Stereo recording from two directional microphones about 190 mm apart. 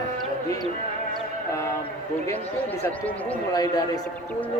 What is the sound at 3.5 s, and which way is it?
Speech, 20° left (ahead or behind).